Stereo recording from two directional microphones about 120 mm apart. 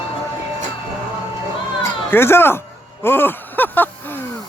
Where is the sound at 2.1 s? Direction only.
20° left (ahead or behind).